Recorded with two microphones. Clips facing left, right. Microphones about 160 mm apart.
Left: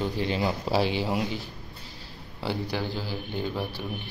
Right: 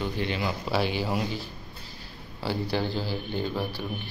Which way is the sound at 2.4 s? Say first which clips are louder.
Right 2 dB; 15° left (ahead or behind).